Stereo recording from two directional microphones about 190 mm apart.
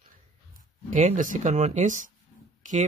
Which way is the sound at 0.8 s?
40° right (ahead or behind).